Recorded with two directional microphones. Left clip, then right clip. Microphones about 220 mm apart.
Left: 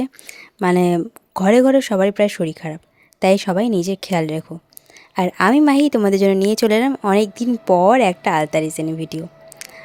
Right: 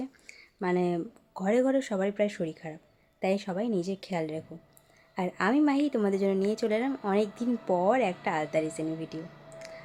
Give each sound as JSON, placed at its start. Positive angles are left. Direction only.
{"t": 0.0, "sound": "a woman's voice", "side_deg": 45}